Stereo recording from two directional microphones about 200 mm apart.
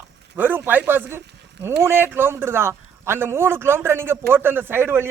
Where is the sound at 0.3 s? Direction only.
10° right (ahead or behind).